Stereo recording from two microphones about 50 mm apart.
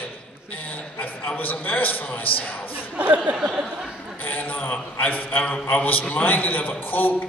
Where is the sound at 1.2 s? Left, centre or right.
Left.